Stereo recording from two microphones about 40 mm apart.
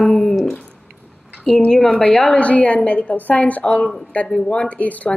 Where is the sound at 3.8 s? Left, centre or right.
Centre.